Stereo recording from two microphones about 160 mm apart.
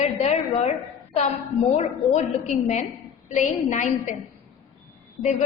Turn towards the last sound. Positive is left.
turn(degrees=50)  # may be behind; listen again after turning